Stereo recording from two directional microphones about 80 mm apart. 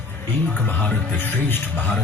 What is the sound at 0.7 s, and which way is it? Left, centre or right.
Speech, left.